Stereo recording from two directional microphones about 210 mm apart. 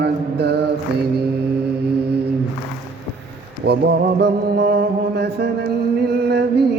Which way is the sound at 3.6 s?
50° right (ahead or behind).